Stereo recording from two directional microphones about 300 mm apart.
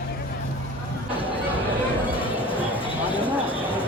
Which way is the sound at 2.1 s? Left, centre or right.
Centre.